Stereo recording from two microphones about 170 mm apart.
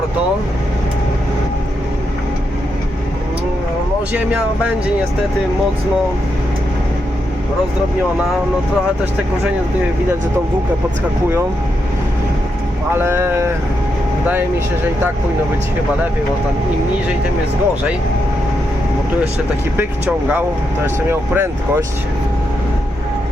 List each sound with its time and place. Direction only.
4.1 s speech: 5° right (ahead or behind)
12.9 s speech: 15° right (ahead or behind)
19.7 s speech: 10° right (ahead or behind)